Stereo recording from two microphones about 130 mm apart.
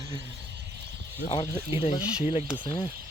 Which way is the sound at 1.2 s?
25° left (ahead or behind).